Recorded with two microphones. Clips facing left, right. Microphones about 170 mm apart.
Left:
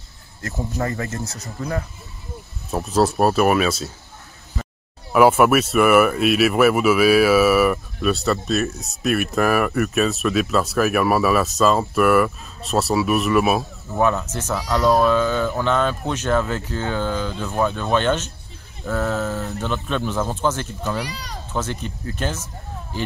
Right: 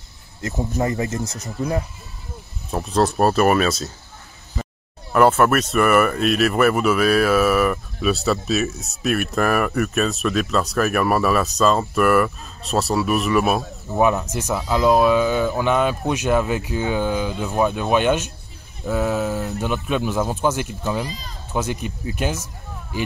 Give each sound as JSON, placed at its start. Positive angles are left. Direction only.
{"t": 0.4, "sound": "speech", "side_deg": -20}
{"t": 2.7, "sound": "speech", "side_deg": 5}
{"t": 5.1, "sound": "speech", "side_deg": 10}
{"t": 13.9, "sound": "speech", "side_deg": -15}
{"t": 21.0, "sound": "speech", "side_deg": 80}
{"t": 21.5, "sound": "speech", "side_deg": -10}